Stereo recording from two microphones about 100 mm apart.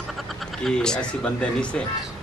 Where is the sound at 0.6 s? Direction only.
5° left (ahead or behind).